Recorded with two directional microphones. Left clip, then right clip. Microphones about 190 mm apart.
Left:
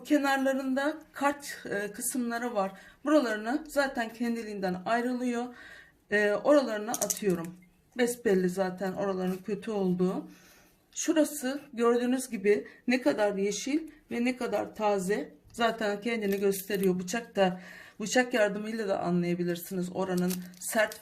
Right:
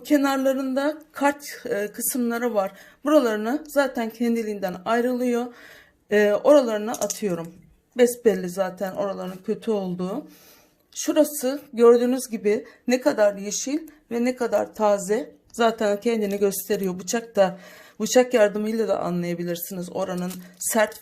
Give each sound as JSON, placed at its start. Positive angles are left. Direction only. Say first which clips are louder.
{"t": 0.0, "sound": "speech", "louder": "right 6 dB", "side_deg": -40}